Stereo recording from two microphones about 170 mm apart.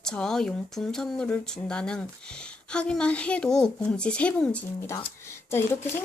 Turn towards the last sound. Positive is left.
turn(degrees=15)  # may be behind; listen again after turning